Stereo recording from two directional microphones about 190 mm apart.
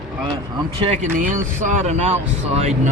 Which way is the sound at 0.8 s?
35° right (ahead or behind).